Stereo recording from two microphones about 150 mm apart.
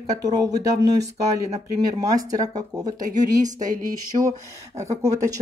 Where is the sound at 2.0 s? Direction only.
25° right (ahead or behind).